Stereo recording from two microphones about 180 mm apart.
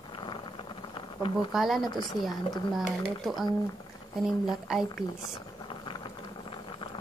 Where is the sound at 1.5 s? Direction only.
Centre (ahead or behind).